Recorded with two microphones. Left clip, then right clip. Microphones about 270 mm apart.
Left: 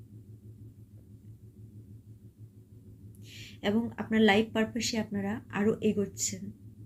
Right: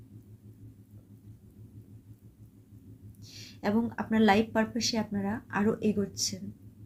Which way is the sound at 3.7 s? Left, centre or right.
Centre.